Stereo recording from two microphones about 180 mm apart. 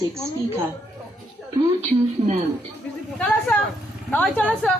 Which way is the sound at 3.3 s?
5° left (ahead or behind).